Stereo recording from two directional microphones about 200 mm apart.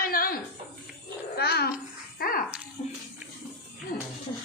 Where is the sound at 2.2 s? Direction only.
45° left (ahead or behind).